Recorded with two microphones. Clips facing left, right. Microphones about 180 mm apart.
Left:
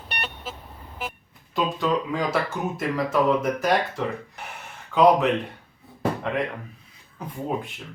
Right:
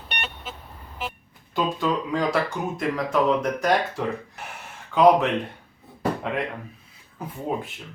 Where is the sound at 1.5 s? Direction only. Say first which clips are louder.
Even; centre (ahead or behind).